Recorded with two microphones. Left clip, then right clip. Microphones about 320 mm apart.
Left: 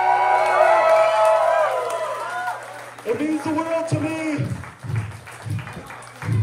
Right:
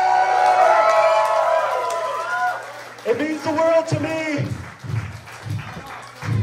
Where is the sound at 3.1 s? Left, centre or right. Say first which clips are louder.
Right 1 dB; right.